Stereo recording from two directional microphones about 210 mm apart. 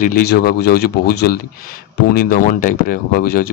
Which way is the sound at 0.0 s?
45° left (ahead or behind).